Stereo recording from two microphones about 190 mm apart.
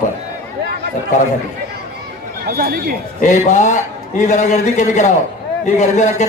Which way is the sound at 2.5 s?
55° right (ahead or behind).